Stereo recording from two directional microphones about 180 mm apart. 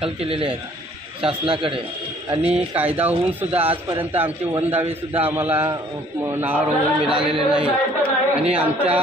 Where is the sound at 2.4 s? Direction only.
5° right (ahead or behind).